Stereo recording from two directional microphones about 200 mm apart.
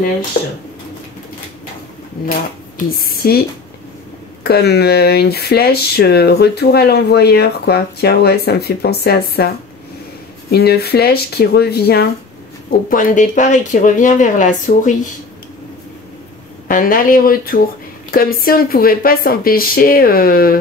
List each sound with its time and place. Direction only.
2.9 s speech: 45° left (ahead or behind)
10.5 s speech: 55° left (ahead or behind)
12.9 s speech: 40° left (ahead or behind)
16.6 s speech: 45° left (ahead or behind)